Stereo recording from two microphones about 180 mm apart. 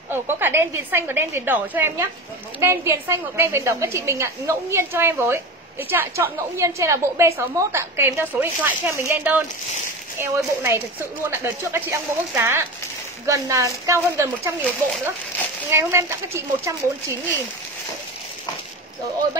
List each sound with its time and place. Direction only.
0.1 s a woman's voice: 10° right (ahead or behind)
15.7 s a woman's voice: 15° right (ahead or behind)